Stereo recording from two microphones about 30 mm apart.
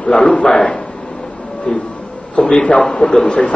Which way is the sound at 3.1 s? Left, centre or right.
Centre.